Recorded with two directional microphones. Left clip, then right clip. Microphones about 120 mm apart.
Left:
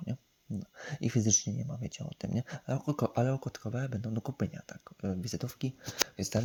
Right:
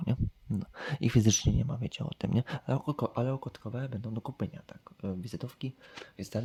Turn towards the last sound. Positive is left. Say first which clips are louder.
# left 4 dB
turn(degrees=15)  # may be behind; listen again after turning